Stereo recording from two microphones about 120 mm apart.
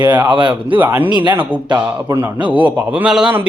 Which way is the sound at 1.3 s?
15° right (ahead or behind).